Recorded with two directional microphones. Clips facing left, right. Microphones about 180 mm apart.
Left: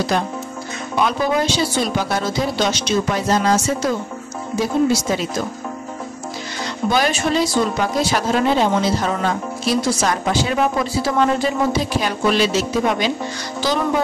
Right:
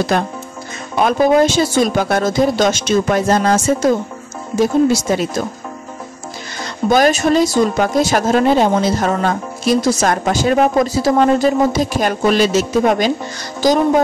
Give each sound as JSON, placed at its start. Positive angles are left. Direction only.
{"t": 0.1, "sound": "a woman's voice", "side_deg": -55}
{"t": 6.9, "sound": "a woman's voice", "side_deg": -45}